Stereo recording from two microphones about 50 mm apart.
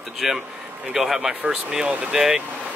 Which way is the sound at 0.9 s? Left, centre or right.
Centre.